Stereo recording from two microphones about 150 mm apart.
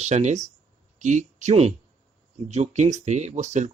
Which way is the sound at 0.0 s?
50° right (ahead or behind).